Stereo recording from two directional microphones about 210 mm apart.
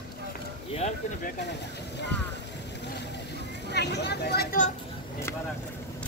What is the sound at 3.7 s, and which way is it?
Speech, 55° left (ahead or behind).